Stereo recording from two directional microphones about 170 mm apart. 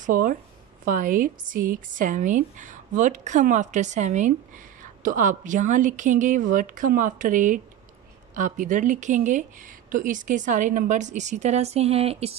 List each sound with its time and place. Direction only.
0.0 s speech: 50° right (ahead or behind); by 12.4 s 35° right (ahead or behind)